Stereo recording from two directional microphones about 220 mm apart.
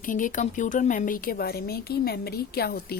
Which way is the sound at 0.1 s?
35° left (ahead or behind).